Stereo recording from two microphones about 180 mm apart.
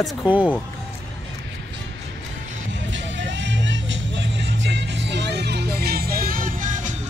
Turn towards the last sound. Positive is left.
turn(degrees=-45)  # may be behind; listen again after turning